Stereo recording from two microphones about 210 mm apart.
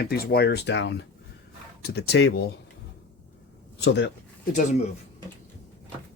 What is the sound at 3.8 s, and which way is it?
Speech, 55° left (ahead or behind).